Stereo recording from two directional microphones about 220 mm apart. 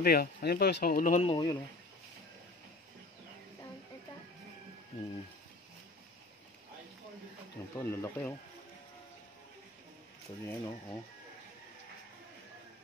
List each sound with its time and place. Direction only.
0.0 s speech: 45° left (ahead or behind)
1.3 s speech: 20° left (ahead or behind)
7.7 s speech: 10° left (ahead or behind)
10.4 s speech: 10° left (ahead or behind)